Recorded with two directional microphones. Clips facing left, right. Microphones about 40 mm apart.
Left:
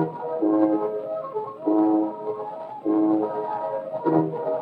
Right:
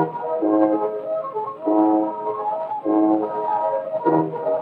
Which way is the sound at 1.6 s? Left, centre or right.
Right.